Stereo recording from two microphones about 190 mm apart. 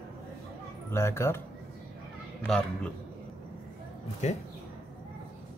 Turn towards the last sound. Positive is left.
turn(degrees=35)  # may be behind; listen again after turning